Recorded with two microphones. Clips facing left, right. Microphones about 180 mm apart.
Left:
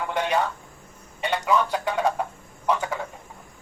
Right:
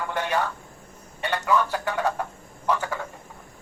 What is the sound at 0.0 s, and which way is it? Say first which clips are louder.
Speech: left 2 dB; 15° left (ahead or behind).